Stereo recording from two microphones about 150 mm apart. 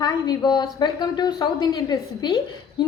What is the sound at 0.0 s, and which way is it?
A woman's voice, 30° left (ahead or behind).